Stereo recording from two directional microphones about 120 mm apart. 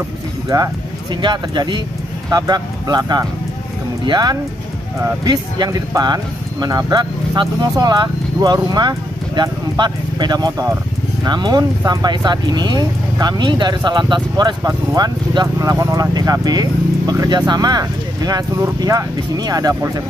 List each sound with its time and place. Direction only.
0.5 s speech: 30° right (ahead or behind)